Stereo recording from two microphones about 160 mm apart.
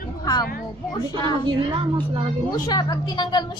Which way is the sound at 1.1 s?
30° right (ahead or behind).